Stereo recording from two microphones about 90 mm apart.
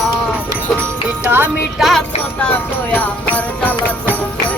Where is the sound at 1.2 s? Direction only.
20° right (ahead or behind).